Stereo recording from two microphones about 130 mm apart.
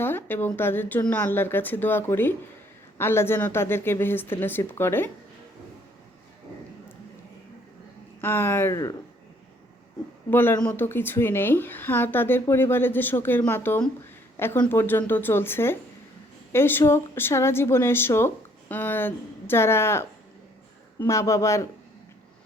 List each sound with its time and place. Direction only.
0.0 s a woman's voice: 15° left (ahead or behind)
8.2 s a woman's voice: 15° left (ahead or behind)
10.2 s a woman's voice: 15° left (ahead or behind)